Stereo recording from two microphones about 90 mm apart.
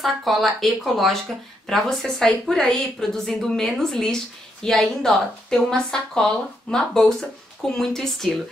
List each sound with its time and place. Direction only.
0.0 s a woman's voice: centre (ahead or behind)